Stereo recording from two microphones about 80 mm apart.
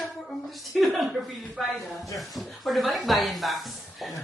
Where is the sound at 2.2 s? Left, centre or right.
Centre.